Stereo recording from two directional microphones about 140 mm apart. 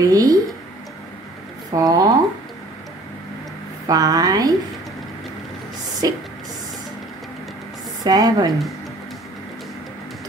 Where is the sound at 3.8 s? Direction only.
25° right (ahead or behind).